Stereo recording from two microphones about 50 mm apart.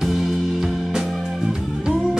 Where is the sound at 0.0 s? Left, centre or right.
Centre.